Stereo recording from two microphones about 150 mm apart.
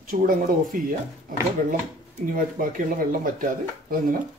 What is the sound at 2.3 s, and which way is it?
Speech, 65° right (ahead or behind).